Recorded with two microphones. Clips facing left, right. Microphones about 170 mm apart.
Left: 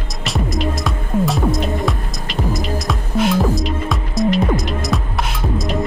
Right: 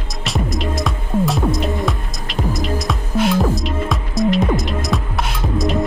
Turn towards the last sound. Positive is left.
turn(degrees=0)  # may be behind; listen again after turning